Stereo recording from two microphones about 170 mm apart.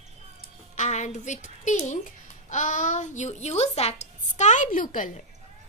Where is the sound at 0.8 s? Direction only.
45° left (ahead or behind).